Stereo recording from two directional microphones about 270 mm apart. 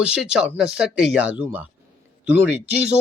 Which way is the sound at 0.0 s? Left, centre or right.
Centre.